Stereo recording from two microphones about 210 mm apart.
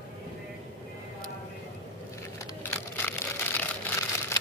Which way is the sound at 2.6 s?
10° left (ahead or behind).